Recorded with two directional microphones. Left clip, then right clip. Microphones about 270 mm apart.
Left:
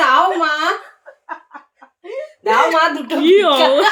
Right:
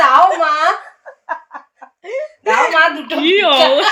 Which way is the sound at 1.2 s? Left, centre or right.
Right.